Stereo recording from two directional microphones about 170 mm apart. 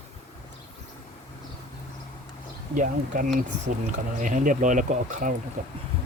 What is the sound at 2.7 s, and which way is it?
Speech, 50° right (ahead or behind).